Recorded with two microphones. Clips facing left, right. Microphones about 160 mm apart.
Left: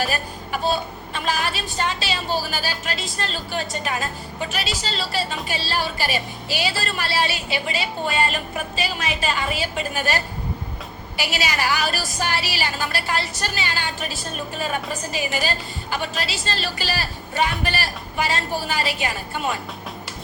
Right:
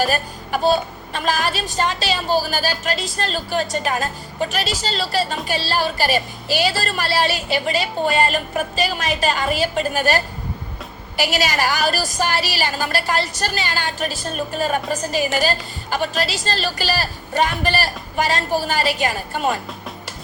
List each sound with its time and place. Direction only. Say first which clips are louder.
1.1 s a woman's voice: right 4 dB; 45° right (ahead or behind)
11.2 s a woman's voice: right 5 dB; 40° right (ahead or behind)
15.2 s a woman's voice: right 4 dB; 45° right (ahead or behind)